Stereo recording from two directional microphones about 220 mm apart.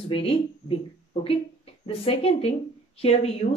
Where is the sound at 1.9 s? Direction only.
25° left (ahead or behind).